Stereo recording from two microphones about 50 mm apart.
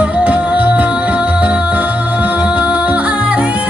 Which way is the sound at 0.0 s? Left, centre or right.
Right.